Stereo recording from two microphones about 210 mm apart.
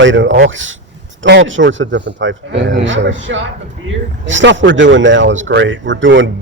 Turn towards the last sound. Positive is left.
turn(degrees=-60)  # may be behind; listen again after turning